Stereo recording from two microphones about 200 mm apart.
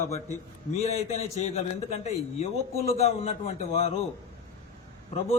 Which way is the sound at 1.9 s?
35° left (ahead or behind).